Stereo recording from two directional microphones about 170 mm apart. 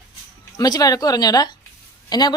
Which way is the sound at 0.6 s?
20° left (ahead or behind).